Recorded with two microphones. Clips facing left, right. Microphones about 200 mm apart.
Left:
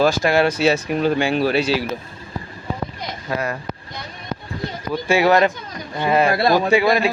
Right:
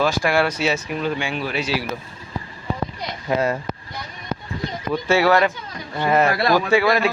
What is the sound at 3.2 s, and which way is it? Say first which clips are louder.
Speech: right 4 dB; 25° right (ahead or behind).